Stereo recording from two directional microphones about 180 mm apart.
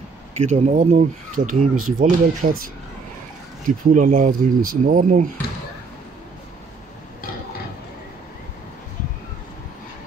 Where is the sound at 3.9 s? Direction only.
45° right (ahead or behind).